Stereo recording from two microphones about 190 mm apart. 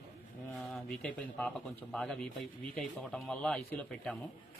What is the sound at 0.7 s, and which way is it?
A man's voice, 5° left (ahead or behind).